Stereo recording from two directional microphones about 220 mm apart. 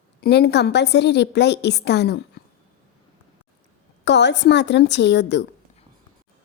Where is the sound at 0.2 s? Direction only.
50° left (ahead or behind).